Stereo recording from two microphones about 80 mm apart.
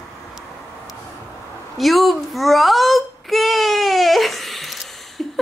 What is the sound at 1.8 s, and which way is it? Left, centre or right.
Babbling, centre.